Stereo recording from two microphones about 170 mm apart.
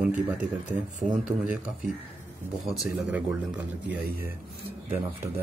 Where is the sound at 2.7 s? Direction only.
5° right (ahead or behind).